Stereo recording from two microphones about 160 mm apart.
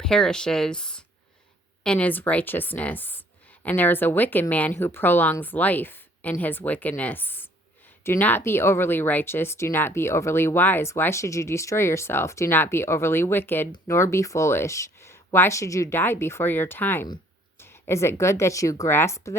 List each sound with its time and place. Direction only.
0.0 s speech: 5° left (ahead or behind)